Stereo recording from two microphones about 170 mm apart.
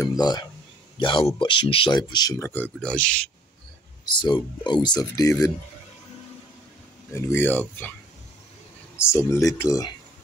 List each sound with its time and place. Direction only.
0.0 s speech: 20° left (ahead or behind); by 3.3 s 5° left (ahead or behind)
4.0 s speech: 25° left (ahead or behind)
7.1 s speech: 15° left (ahead or behind)
8.9 s speech: 15° left (ahead or behind)